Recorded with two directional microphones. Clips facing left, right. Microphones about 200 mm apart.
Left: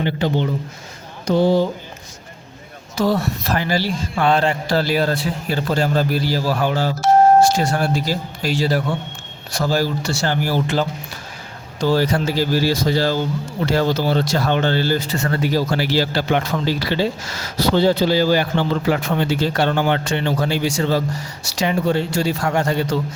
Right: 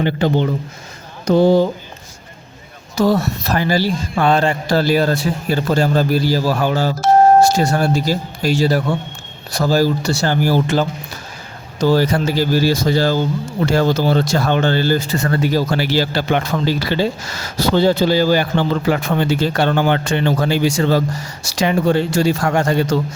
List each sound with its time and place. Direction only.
0.0 s speech: 50° right (ahead or behind)
2.9 s speech: 40° right (ahead or behind)
11.9 s speech: 50° right (ahead or behind)
20.5 s speech: 90° right